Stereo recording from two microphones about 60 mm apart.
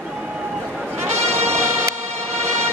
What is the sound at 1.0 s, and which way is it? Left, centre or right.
Music, right.